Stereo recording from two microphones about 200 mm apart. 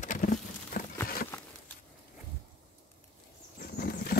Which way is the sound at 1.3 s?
10° left (ahead or behind).